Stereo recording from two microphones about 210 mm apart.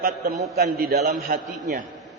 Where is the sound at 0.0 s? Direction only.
45° right (ahead or behind).